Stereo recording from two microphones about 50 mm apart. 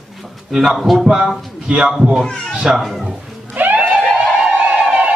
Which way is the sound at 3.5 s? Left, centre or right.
Right.